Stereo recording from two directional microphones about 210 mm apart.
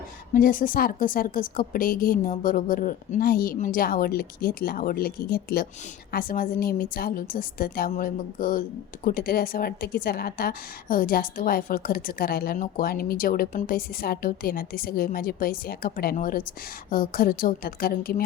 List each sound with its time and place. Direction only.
0.3 s a woman's voice: 40° left (ahead or behind)